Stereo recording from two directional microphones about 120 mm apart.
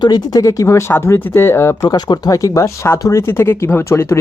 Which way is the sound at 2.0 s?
35° left (ahead or behind).